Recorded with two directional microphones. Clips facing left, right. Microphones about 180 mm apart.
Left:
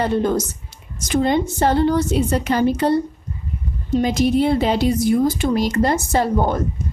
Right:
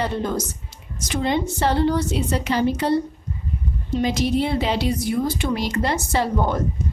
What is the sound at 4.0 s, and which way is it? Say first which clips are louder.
Speech: left 4 dB; 50° left (ahead or behind).